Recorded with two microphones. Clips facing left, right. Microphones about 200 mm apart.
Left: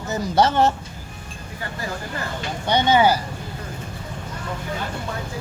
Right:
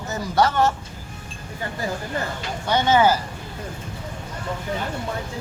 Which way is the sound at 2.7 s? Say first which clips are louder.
Left 1 dB; 15° left (ahead or behind).